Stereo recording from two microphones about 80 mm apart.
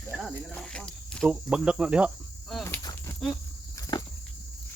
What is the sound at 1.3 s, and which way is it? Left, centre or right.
Cricket, centre.